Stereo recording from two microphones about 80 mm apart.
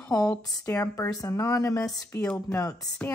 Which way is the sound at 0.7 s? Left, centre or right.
Left.